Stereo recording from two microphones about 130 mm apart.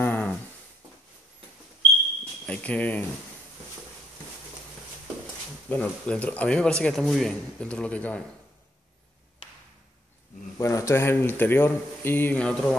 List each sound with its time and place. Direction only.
0.0 s a sound: 15° left (ahead or behind)
2.4 s speech: 10° left (ahead or behind)
5.7 s a man's voice: 10° left (ahead or behind)
10.6 s a man's voice: 20° left (ahead or behind)